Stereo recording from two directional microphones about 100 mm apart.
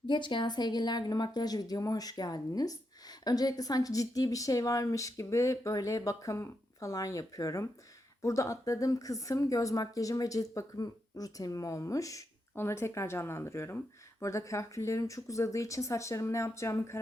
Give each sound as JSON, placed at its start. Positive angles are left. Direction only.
{"t": 0.1, "sound": "a woman's voice", "side_deg": 50}